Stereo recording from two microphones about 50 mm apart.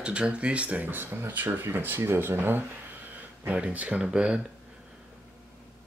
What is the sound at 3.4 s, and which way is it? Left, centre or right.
Speech, right.